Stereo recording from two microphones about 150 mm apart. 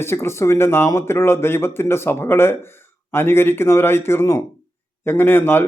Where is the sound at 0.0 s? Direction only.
15° left (ahead or behind).